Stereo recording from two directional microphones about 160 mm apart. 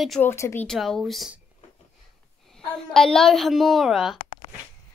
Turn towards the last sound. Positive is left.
turn(degrees=0)  # may be behind; listen again after turning